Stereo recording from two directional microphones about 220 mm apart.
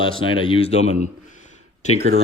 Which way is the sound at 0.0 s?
25° left (ahead or behind).